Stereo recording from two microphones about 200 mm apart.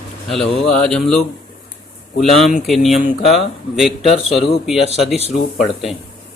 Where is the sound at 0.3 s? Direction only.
Centre (ahead or behind).